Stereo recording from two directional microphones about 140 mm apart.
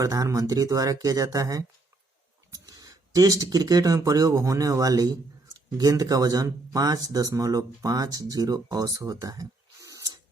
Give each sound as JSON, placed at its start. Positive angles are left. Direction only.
{"t": 0.0, "sound": "speech", "side_deg": -25}